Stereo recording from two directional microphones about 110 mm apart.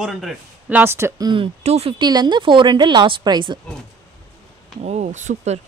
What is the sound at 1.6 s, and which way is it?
Speech, 75° right (ahead or behind).